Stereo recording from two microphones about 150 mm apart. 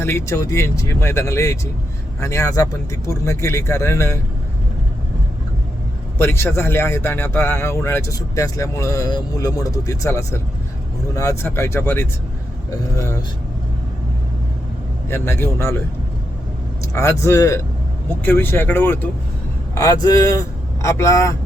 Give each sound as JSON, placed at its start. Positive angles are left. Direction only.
{"t": 0.0, "sound": "a man's voice", "side_deg": 15}
{"t": 6.1, "sound": "a man's voice", "side_deg": 15}
{"t": 15.1, "sound": "a man's voice", "side_deg": 15}
{"t": 16.9, "sound": "a man's voice", "side_deg": 20}
{"t": 19.7, "sound": "speech", "side_deg": 25}